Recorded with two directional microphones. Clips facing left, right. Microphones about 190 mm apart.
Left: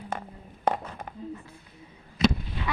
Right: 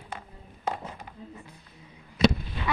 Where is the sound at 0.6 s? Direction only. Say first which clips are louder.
Left 5 dB; 50° left (ahead or behind).